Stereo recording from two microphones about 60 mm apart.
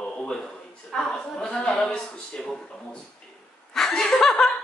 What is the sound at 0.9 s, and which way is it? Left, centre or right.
Speech, centre.